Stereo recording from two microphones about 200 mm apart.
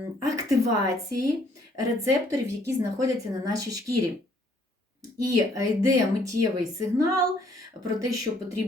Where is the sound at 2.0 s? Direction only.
15° right (ahead or behind).